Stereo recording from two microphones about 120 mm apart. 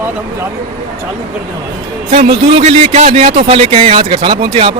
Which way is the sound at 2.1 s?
70° right (ahead or behind).